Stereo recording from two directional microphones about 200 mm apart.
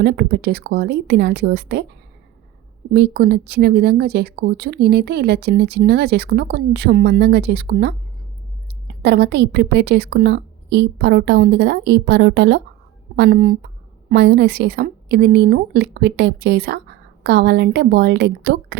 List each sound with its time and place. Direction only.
0.0 s a woman's voice: 55° right (ahead or behind)
2.9 s a woman's voice: 55° right (ahead or behind)